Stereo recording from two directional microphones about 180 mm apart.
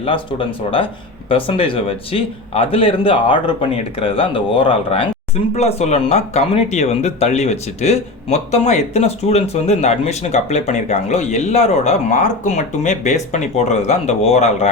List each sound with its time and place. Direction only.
0.0 s speech: 30° left (ahead or behind)